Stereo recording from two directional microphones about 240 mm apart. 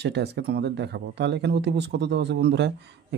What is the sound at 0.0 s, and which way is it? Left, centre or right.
Speech, right.